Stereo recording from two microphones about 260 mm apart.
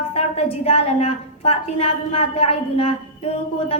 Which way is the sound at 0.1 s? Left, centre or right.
Left.